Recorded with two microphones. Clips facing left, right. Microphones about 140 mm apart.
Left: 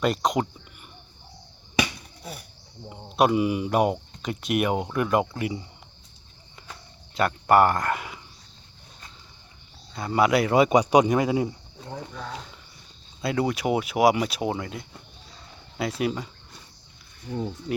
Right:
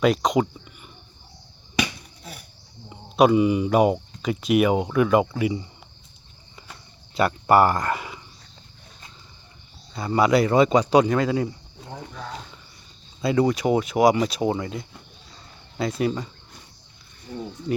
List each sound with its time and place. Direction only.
0.0 s speech: centre (ahead or behind)
2.9 s speech: centre (ahead or behind)
7.1 s speech: 5° right (ahead or behind)
9.9 s speech: centre (ahead or behind)
13.2 s speech: 5° left (ahead or behind)